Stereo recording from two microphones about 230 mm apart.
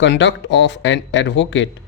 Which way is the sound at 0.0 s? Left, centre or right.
Left.